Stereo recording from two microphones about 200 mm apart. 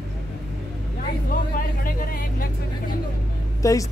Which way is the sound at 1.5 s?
45° left (ahead or behind).